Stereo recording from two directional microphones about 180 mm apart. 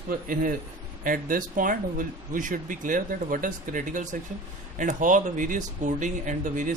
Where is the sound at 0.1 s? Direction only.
50° right (ahead or behind).